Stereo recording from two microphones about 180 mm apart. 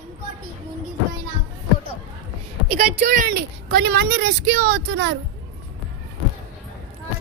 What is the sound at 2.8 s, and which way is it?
Speech, 55° right (ahead or behind).